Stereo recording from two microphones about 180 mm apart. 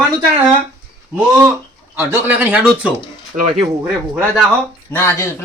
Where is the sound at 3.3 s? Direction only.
45° right (ahead or behind).